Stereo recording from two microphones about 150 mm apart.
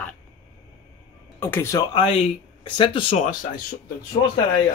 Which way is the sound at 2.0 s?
40° left (ahead or behind).